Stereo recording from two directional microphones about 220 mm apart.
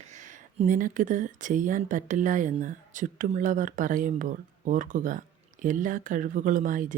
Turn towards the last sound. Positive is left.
turn(degrees=-35)  # may be behind; listen again after turning